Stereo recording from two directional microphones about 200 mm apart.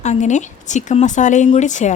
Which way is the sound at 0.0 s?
35° left (ahead or behind).